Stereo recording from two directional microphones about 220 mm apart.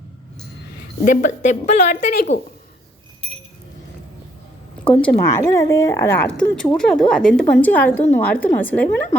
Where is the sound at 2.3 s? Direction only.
55° left (ahead or behind).